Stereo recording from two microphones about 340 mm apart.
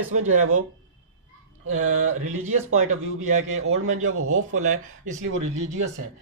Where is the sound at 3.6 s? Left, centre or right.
Right.